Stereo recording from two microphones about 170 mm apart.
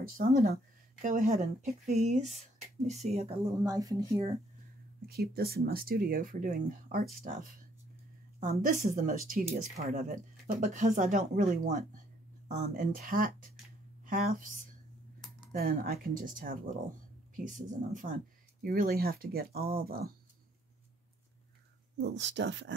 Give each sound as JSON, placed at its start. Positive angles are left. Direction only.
{"t": 0.2, "sound": "speech", "side_deg": -60}
{"t": 1.0, "sound": "speech", "side_deg": -50}
{"t": 3.6, "sound": "speech", "side_deg": -20}
{"t": 5.0, "sound": "speech", "side_deg": -65}
{"t": 12.7, "sound": "speech", "side_deg": -55}
{"t": 22.0, "sound": "speech", "side_deg": -90}